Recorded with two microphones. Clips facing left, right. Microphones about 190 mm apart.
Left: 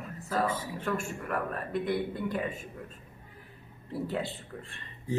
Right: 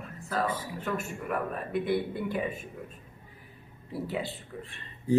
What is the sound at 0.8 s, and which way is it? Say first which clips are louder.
Speech: even; 5° right (ahead or behind).